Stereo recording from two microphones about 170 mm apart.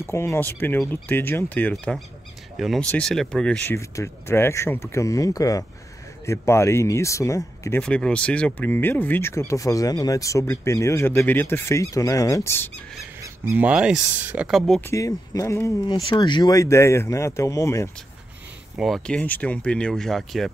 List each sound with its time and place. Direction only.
0.0 s speech: 15° left (ahead or behind)
3.7 s speech: 15° left (ahead or behind)
7.8 s speech: 5° left (ahead or behind)
13.2 s speech: 10° right (ahead or behind)
14.9 s speech: 20° left (ahead or behind)
15.9 s speech: 30° left (ahead or behind)
18.8 s speech: centre (ahead or behind)